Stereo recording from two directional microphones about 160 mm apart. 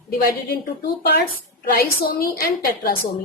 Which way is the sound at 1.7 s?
70° left (ahead or behind).